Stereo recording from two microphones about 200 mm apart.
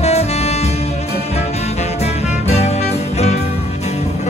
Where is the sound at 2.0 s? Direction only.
30° left (ahead or behind).